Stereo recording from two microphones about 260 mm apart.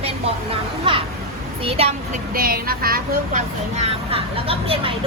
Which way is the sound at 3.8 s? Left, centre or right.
Right.